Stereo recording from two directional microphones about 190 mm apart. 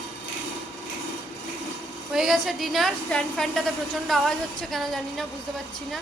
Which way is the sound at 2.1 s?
Centre (ahead or behind).